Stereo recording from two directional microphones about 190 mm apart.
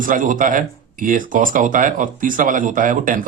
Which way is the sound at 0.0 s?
45° right (ahead or behind).